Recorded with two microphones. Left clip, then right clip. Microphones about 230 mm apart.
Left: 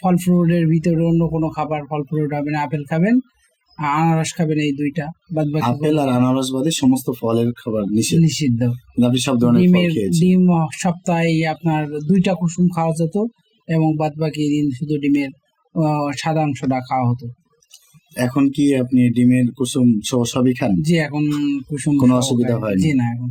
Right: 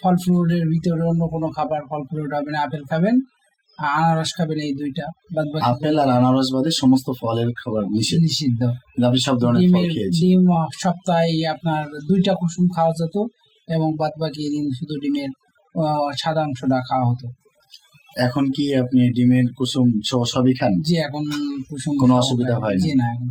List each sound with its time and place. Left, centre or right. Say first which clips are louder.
0.0 s speech: left 2 dB; left
18.3 s speech: left 7 dB; left